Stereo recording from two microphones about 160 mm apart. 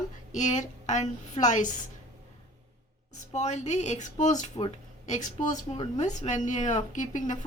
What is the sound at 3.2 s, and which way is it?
Speech, 45° left (ahead or behind).